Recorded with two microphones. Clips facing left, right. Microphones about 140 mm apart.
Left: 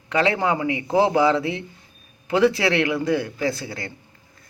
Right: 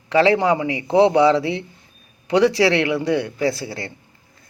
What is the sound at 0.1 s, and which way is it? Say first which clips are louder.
Speech: right 5 dB; 30° right (ahead or behind).